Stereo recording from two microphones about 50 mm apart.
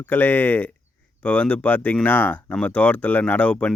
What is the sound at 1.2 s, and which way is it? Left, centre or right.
Speech, left.